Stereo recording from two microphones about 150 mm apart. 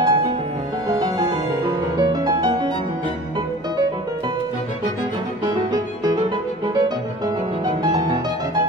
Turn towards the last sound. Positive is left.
turn(degrees=-30)  # may be behind; listen again after turning